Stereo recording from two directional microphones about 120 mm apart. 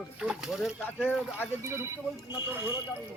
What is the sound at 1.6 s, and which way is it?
Speech, 20° right (ahead or behind).